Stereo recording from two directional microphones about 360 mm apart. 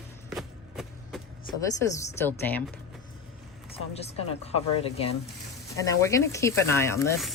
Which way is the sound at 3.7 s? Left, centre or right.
Centre.